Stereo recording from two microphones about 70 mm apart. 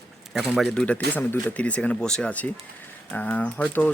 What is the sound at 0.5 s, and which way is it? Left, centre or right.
Speech, centre.